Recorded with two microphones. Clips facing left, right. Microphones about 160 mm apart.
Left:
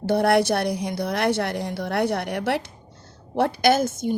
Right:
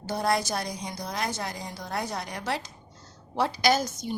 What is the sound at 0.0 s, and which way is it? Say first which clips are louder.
A woman's voice: left 8 dB; 65° left (ahead or behind).